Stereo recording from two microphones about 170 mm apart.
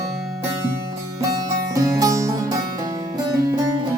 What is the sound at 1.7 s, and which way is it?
Music, 20° right (ahead or behind).